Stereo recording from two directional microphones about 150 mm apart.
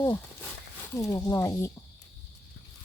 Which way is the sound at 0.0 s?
15° left (ahead or behind).